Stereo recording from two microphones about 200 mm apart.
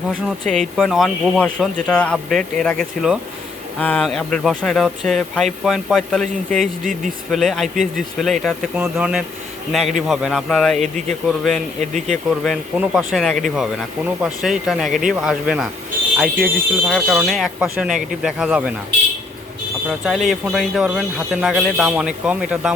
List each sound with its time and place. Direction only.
0.3 s speech: centre (ahead or behind)
19.9 s speech: centre (ahead or behind)